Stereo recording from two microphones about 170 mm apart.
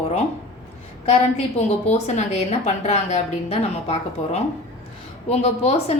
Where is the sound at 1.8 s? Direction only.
40° left (ahead or behind).